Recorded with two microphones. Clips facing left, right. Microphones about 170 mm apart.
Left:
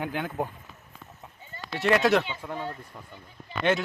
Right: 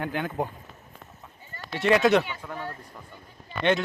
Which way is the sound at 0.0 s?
10° left (ahead or behind).